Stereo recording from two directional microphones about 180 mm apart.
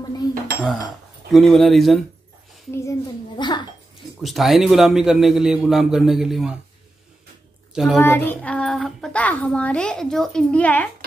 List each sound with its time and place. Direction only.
1.3 s a man's voice: centre (ahead or behind)
2.7 s a child's voice: 15° left (ahead or behind)
4.2 s a man's voice: centre (ahead or behind)
7.7 s a child's voice: centre (ahead or behind)
8.0 s speech: 10° left (ahead or behind)